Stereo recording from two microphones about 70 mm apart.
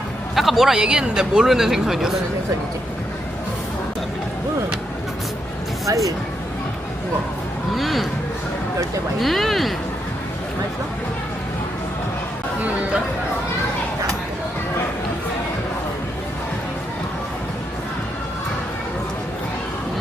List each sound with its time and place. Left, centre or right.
0.3 s speech: centre
5.8 s speech: right
7.8 s speech: centre
9.1 s speech: centre